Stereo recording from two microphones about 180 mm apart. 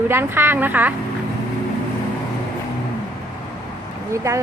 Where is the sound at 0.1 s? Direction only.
10° right (ahead or behind).